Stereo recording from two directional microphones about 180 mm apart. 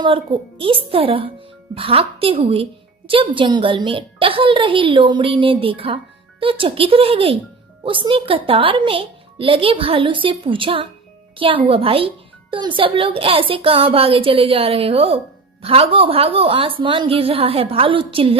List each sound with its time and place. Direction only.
0.0 s speech: 30° right (ahead or behind)